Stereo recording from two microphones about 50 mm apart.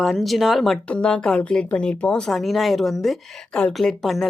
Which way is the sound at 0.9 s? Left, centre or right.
Centre.